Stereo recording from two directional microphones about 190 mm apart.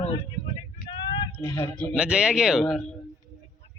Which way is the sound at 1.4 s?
10° left (ahead or behind).